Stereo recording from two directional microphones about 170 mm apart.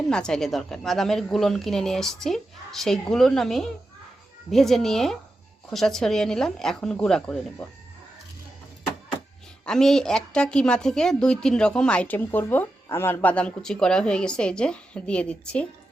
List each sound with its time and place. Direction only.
0.1 s a woman's voice: 5° left (ahead or behind)
9.6 s a woman's voice: 5° left (ahead or behind)